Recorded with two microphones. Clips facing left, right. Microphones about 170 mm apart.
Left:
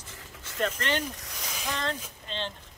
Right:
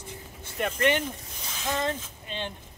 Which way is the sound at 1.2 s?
90° left.